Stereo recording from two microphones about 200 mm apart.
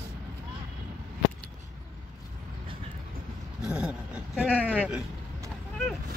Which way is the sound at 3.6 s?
5° right (ahead or behind).